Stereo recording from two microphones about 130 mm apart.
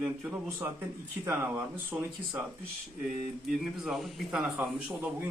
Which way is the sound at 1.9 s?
15° right (ahead or behind).